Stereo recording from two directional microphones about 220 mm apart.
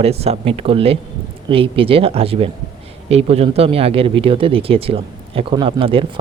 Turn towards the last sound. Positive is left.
turn(degrees=-25)  # may be behind; listen again after turning